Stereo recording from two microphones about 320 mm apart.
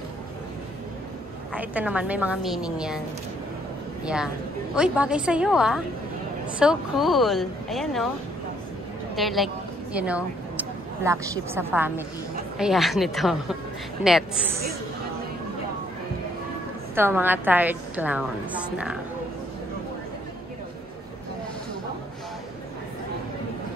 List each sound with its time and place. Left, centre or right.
1.5 s a woman's voice: centre
4.0 s a woman's voice: centre
9.1 s a woman's voice: centre
16.9 s a woman's voice: centre